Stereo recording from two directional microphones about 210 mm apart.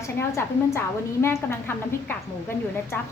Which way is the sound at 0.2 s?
10° left (ahead or behind).